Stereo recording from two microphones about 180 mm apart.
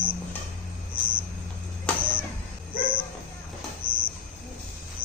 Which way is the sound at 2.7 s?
25° left (ahead or behind).